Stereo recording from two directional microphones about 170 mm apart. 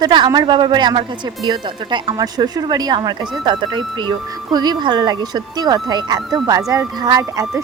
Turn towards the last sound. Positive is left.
turn(degrees=-20)  # may be behind; listen again after turning